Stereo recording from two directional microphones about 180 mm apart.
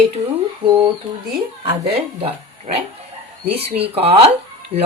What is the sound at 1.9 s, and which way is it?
Speech, 35° right (ahead or behind).